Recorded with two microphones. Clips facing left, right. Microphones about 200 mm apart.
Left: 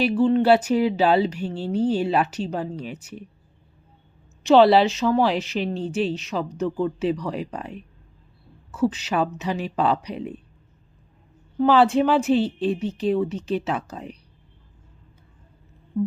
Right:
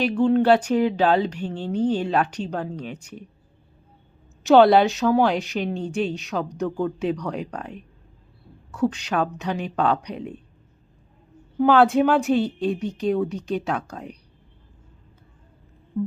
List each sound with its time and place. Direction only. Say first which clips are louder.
0.0 s a woman's voice: even; 5° left (ahead or behind)
4.4 s a woman's voice: right 1 dB; centre (ahead or behind)
11.5 s a woman's voice: right 1 dB; centre (ahead or behind)